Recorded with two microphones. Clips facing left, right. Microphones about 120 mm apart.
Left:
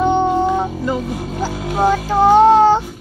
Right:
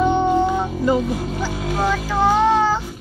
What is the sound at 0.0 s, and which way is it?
Music, 30° left (ahead or behind).